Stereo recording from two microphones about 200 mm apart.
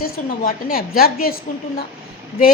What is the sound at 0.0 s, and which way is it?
A woman's voice, 45° left (ahead or behind).